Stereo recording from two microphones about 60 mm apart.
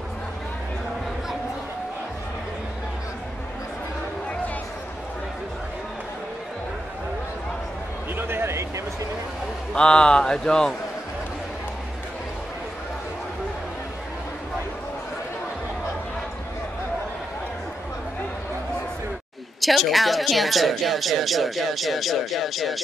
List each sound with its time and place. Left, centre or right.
8.2 s a sound: right
9.8 s speech: centre
19.6 s speech: centre